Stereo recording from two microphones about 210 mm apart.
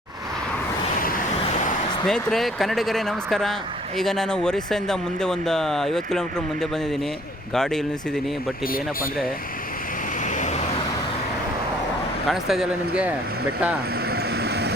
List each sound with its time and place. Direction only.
2.0 s speech: centre (ahead or behind)
8.6 s speech: 45° left (ahead or behind)
10.2 s vehicle: 35° left (ahead or behind)
12.3 s speech: centre (ahead or behind)
14.1 s vehicle: 50° right (ahead or behind)